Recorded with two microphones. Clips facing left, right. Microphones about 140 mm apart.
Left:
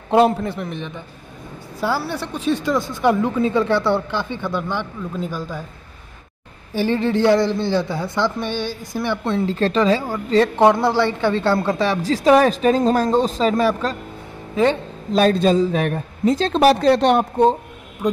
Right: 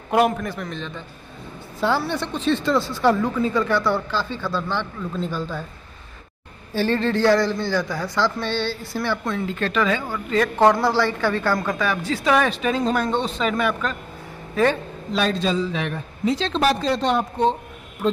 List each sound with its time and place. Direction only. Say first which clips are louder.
0.1 s a man's voice: left 4 dB; 25° left (ahead or behind); by 5.7 s 10° left (ahead or behind)
6.7 s a man's voice: left 2 dB; 15° left (ahead or behind)
9.2 s speech: left 5 dB; 35° left (ahead or behind)
10.6 s a man's voice: right 1 dB; 20° left (ahead or behind); by 13.9 s 35° left (ahead or behind)
14.5 s speech: left 2 dB; 20° left (ahead or behind)
15.1 s a man's voice: left 7 dB; 45° left (ahead or behind)
16.6 s speech: left 7 dB; 65° left (ahead or behind); by 17.6 s 50° left (ahead or behind)